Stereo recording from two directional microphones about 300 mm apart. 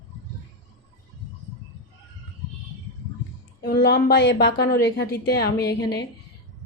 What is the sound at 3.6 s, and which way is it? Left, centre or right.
A woman's voice, left.